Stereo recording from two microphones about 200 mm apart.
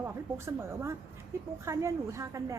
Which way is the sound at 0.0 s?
10° right (ahead or behind).